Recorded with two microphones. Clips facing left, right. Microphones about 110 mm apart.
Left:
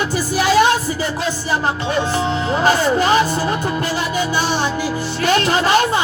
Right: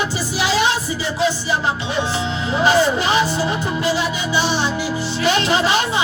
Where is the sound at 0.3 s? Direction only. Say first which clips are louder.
Left 5 dB; 50° left (ahead or behind).